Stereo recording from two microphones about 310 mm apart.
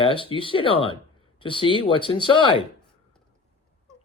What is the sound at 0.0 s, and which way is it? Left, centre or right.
Speech, centre.